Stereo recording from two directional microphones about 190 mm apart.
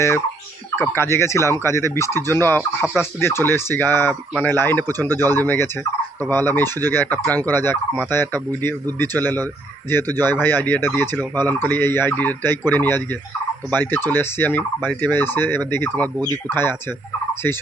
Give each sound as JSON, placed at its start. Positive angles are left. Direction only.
{"t": 0.8, "sound": "turkey", "side_deg": 15}
{"t": 2.8, "sound": "speech", "side_deg": -5}
{"t": 3.2, "sound": "turkey", "side_deg": 15}
{"t": 16.1, "sound": "speech", "side_deg": -15}
{"t": 16.5, "sound": "turkey", "side_deg": 10}